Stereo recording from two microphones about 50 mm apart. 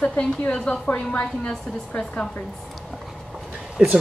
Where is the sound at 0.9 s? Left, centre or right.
Left.